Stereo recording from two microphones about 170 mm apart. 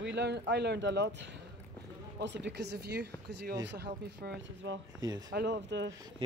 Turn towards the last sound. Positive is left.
turn(degrees=-90)